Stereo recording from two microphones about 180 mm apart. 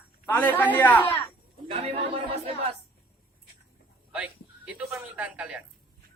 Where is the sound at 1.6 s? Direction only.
35° right (ahead or behind).